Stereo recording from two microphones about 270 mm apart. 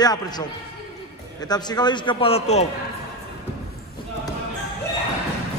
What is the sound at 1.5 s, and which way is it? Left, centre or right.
A man's voice, centre.